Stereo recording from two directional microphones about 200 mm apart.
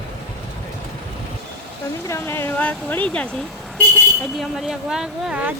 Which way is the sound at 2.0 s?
15° left (ahead or behind).